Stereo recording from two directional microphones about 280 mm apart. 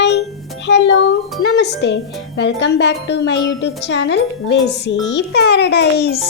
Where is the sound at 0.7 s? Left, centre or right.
Left.